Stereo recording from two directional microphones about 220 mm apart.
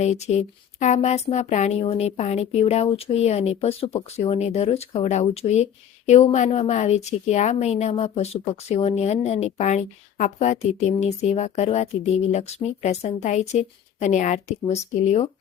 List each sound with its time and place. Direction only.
0.0 s a woman's voice: 30° left (ahead or behind)